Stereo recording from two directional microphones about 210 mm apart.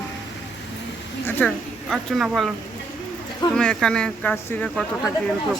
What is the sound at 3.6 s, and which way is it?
Speech, 5° left (ahead or behind).